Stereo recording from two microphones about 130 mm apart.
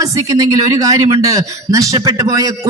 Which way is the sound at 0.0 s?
25° right (ahead or behind).